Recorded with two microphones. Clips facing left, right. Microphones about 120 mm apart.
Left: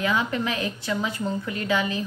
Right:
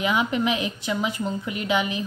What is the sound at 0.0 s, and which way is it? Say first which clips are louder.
A woman's voice: right 2 dB; 15° right (ahead or behind).